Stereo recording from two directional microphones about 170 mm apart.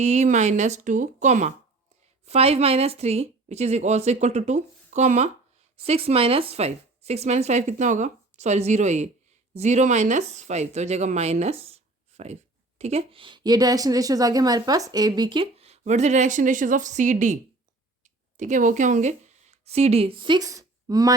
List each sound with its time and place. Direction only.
0.0 s a woman's voice: 40° right (ahead or behind)
18.3 s speech: 50° right (ahead or behind); by 21.1 s 20° right (ahead or behind)